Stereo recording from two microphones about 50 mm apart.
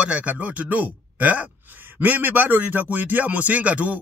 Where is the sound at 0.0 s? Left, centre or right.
Right.